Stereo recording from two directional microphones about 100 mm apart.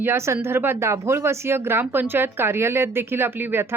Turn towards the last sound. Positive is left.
turn(degrees=-25)  # may be behind; listen again after turning